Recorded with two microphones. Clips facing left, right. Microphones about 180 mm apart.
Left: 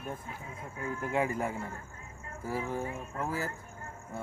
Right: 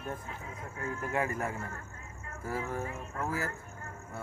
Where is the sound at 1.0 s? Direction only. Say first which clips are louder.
Left 2 dB; 20° left (ahead or behind).